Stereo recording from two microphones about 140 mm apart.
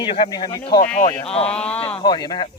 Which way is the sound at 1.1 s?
40° left (ahead or behind).